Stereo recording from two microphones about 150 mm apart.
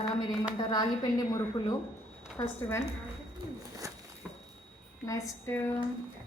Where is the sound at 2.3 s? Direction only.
15° left (ahead or behind).